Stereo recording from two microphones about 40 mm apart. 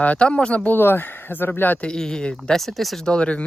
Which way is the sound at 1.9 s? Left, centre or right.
Centre.